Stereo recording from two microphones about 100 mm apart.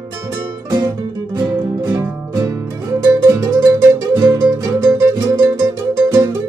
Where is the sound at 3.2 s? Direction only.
35° right (ahead or behind).